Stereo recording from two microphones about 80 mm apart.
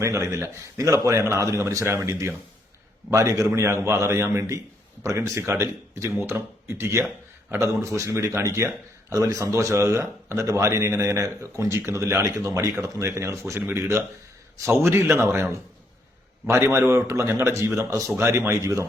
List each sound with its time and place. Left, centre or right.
0.0 s speech: right
16.5 s speech: right